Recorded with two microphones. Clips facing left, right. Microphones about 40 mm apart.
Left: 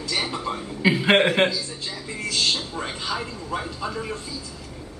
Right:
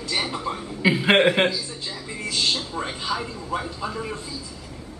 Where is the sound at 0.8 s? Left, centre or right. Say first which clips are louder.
Right 1 dB; centre.